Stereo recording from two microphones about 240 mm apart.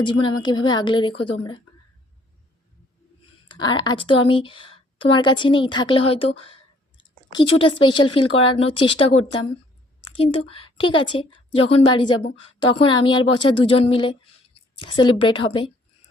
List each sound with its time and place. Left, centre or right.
0.0 s a woman's voice: centre
3.5 s a woman's voice: centre